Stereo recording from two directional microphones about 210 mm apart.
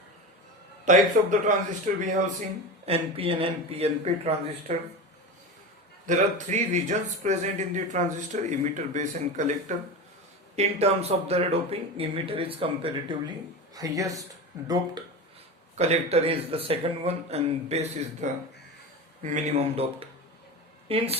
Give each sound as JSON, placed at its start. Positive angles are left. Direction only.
{"t": 0.9, "sound": "speech", "side_deg": -35}
{"t": 6.1, "sound": "speech", "side_deg": -35}
{"t": 15.7, "sound": "a woman's voice", "side_deg": -30}